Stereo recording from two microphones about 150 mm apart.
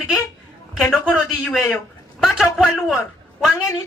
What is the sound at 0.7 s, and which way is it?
A man's voice, centre (ahead or behind).